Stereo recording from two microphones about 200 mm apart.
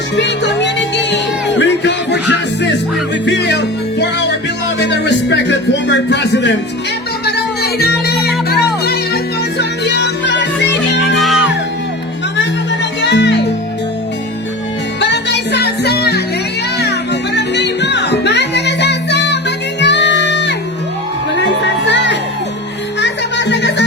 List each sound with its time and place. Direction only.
0.2 s music: 60° left (ahead or behind)
3.2 s music: 60° left (ahead or behind)
11.2 s music: centre (ahead or behind)
13.0 s music: 60° left (ahead or behind)
15.1 s music: 60° left (ahead or behind)
21.3 s a sound: 60° left (ahead or behind)
23.0 s music: 60° left (ahead or behind)